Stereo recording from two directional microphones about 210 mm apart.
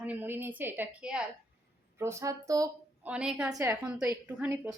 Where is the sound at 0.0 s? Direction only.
10° right (ahead or behind).